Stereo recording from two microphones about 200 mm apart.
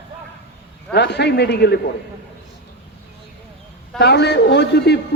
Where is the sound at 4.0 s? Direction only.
55° left (ahead or behind).